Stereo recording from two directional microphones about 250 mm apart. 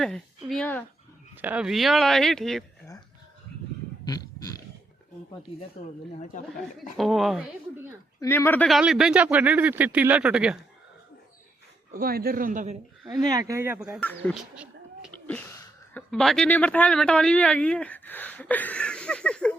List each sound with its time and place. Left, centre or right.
0.0 s speech: centre
1.4 s speech: centre
4.0 s a sound: centre
5.8 s speech: left
6.9 s speech: centre
11.9 s a man's voice: right
13.1 s speech: centre
14.0 s speech: centre
14.5 s a sound: centre
16.0 s speech: centre